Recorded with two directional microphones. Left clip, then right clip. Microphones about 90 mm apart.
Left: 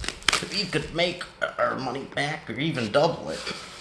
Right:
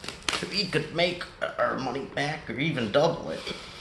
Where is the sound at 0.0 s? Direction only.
45° left (ahead or behind).